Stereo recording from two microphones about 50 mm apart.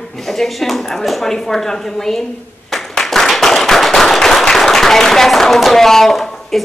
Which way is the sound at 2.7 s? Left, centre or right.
Centre.